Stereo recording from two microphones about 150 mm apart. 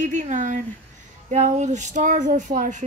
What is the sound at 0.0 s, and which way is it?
Speech, 55° right (ahead or behind).